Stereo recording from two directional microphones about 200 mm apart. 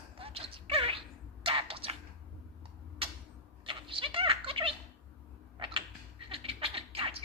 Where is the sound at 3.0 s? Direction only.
25° right (ahead or behind).